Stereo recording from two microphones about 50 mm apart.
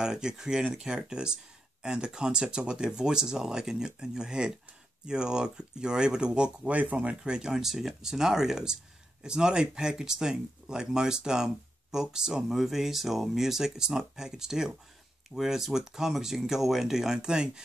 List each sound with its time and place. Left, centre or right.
0.0 s speech: centre